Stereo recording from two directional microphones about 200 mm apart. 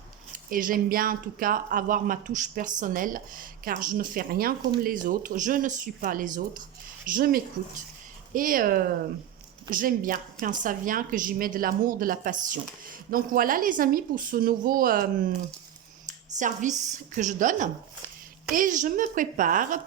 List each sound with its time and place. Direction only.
0.5 s speech: 45° right (ahead or behind)
16.4 s a woman's voice: 40° right (ahead or behind)